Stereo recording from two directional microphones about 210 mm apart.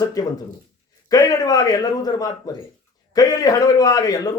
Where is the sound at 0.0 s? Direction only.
15° left (ahead or behind).